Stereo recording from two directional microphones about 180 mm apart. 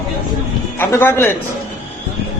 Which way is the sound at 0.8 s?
15° left (ahead or behind).